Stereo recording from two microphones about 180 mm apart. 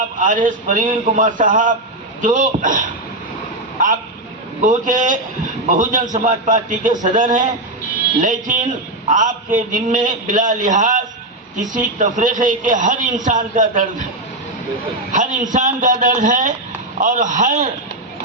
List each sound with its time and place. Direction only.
0.2 s a man's voice: 45° right (ahead or behind)
4.6 s a man's voice: 45° right (ahead or behind)
14.8 s a man's voice: 45° right (ahead or behind)